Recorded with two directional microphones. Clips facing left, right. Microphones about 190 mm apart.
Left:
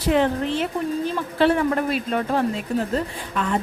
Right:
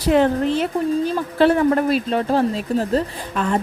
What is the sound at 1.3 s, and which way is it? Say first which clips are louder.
Speech: right 4 dB; 40° right (ahead or behind).